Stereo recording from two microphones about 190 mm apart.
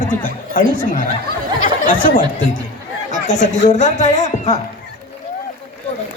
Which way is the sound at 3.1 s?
40° left (ahead or behind).